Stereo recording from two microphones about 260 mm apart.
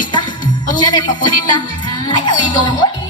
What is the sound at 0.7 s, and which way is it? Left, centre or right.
A man's voice, centre.